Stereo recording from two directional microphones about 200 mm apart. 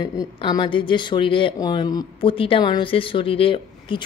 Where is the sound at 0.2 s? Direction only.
20° left (ahead or behind).